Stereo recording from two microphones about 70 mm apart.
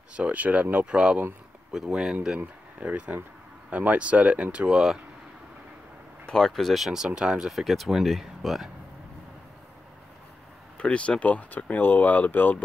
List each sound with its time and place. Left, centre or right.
0.1 s speech: centre
6.2 s speech: centre
10.8 s speech: centre